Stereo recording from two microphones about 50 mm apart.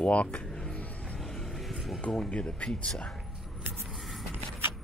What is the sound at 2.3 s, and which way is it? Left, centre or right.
Speech, left.